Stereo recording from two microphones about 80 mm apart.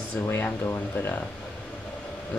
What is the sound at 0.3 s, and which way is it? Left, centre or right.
Speech, left.